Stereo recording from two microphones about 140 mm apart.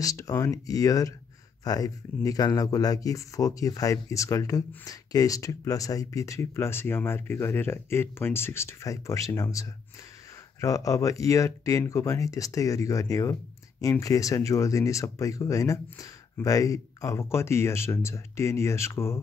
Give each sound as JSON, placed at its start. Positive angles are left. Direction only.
{"t": 0.0, "sound": "speech", "side_deg": 25}